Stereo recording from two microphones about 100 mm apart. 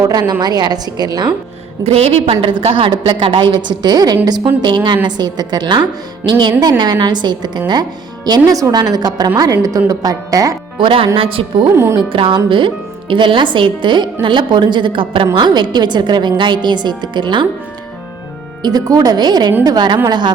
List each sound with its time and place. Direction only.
0.0 s speech: 40° right (ahead or behind)
1.8 s a woman's voice: 80° right; by 10.5 s 35° right (ahead or behind)
10.8 s a woman's voice: 60° right (ahead or behind)
11.8 s speech: 25° right (ahead or behind)
12.1 s a woman's voice: 60° right (ahead or behind)
18.6 s speech: 40° right (ahead or behind)